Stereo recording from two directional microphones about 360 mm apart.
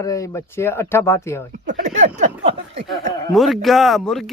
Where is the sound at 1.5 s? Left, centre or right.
Right.